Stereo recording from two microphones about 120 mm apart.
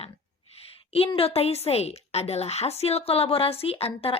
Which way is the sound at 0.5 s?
55° left (ahead or behind).